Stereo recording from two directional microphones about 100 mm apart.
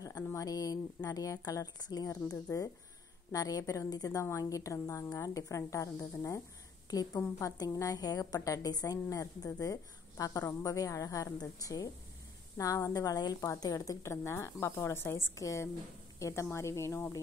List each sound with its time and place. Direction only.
0.0 s a woman's voice: 35° left (ahead or behind)